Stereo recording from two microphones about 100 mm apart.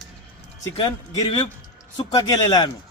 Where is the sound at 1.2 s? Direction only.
55° left (ahead or behind).